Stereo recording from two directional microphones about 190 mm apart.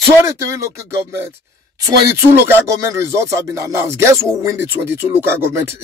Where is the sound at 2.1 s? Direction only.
15° right (ahead or behind).